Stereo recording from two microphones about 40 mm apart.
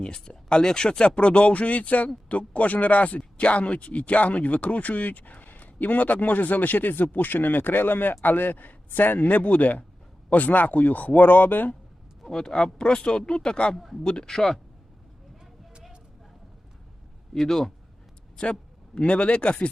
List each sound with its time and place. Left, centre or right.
0.0 s speech: centre; by 11.8 s left
12.2 s speech: centre
13.7 s speech: centre
14.0 s speech: left
17.4 s speech: centre
18.9 s speech: left